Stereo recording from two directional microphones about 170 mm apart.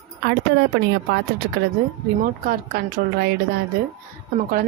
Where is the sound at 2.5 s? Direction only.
65° right (ahead or behind).